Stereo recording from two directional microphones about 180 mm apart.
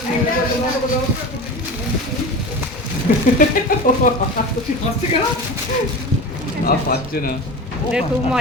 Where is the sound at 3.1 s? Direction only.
50° left (ahead or behind).